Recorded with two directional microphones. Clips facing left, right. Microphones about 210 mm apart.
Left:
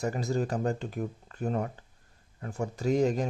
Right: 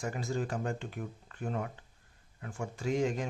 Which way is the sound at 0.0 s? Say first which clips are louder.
Left 5 dB; 40° left (ahead or behind).